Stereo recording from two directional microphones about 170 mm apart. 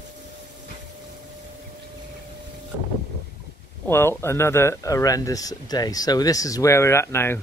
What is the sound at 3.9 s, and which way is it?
Speech, 15° left (ahead or behind).